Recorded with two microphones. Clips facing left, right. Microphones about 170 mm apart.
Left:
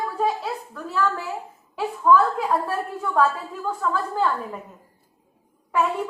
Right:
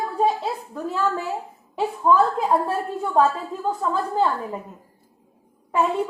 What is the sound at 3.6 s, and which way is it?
Speech, 25° right (ahead or behind).